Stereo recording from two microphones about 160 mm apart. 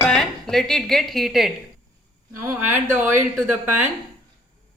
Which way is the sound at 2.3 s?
15° right (ahead or behind).